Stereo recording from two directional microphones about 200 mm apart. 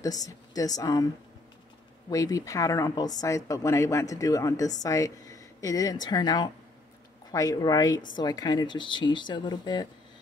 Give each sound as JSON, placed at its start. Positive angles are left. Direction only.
{"t": 0.0, "sound": "speech", "side_deg": 20}
{"t": 2.0, "sound": "speech", "side_deg": 15}